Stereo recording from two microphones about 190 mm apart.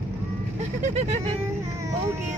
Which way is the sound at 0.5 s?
35° right (ahead or behind).